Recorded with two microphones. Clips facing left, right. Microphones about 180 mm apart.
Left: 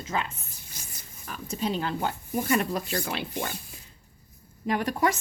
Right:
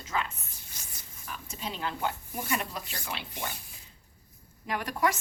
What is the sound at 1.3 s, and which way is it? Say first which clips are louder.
Speech: left 9 dB; 40° left (ahead or behind).